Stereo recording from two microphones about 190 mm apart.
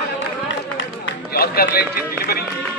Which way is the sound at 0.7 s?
80° left.